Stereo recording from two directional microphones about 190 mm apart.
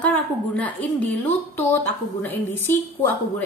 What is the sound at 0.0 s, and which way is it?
A woman's voice, 10° left (ahead or behind).